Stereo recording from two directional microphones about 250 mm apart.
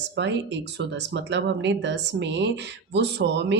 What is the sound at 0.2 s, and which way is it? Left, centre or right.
Speech, right.